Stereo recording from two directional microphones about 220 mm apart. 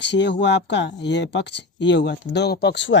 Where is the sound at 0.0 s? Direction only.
50° left (ahead or behind).